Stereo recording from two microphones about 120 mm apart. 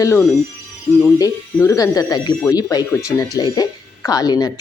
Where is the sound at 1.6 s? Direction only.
30° left (ahead or behind).